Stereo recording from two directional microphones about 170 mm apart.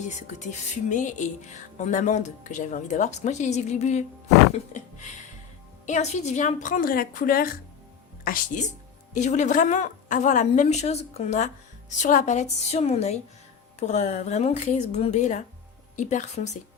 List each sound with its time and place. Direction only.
0.9 s a woman's voice: 45° left (ahead or behind)
9.1 s a woman's voice: 45° left (ahead or behind)